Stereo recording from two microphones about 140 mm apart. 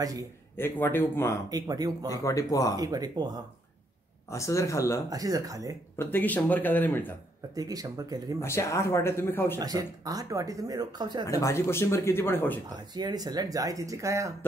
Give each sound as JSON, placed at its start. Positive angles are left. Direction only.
{"t": 0.0, "sound": "speech", "side_deg": -25}
{"t": 0.6, "sound": "speech", "side_deg": 15}
{"t": 1.5, "sound": "speech", "side_deg": -25}
{"t": 2.0, "sound": "speech", "side_deg": 25}
{"t": 2.8, "sound": "speech", "side_deg": -25}
{"t": 4.3, "sound": "speech", "side_deg": 20}
{"t": 5.1, "sound": "speech", "side_deg": -25}
{"t": 5.9, "sound": "speech", "side_deg": 15}
{"t": 7.5, "sound": "speech", "side_deg": -25}
{"t": 8.4, "sound": "speech", "side_deg": 20}
{"t": 9.6, "sound": "speech", "side_deg": -25}
{"t": 11.2, "sound": "speech", "side_deg": 20}
{"t": 12.9, "sound": "speech", "side_deg": -30}